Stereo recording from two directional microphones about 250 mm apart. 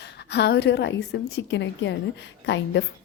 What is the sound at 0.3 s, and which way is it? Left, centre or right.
A woman's voice, left.